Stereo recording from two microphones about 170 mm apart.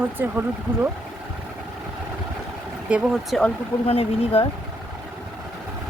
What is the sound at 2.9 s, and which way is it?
Speech, 5° right (ahead or behind).